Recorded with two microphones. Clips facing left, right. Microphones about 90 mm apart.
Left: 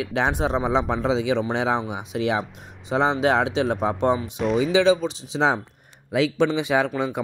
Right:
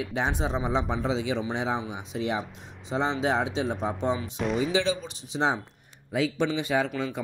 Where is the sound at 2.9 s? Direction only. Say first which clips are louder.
Left 6 dB; 60° left (ahead or behind).